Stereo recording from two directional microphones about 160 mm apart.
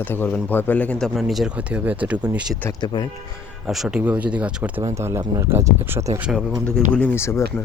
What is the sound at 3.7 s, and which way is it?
Speech, 5° right (ahead or behind).